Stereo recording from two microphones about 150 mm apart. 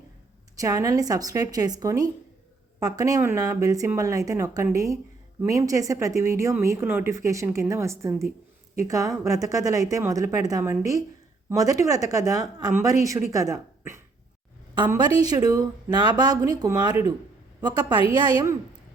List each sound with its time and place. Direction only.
0.6 s speech: 20° right (ahead or behind)